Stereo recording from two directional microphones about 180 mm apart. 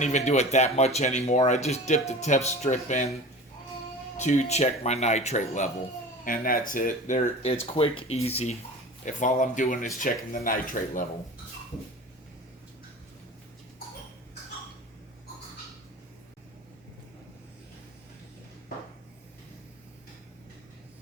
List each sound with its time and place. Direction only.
0.0 s speech: 40° left (ahead or behind)
4.2 s speech: 40° left (ahead or behind)
7.6 s speech: 30° left (ahead or behind)
9.0 s speech: 45° left (ahead or behind)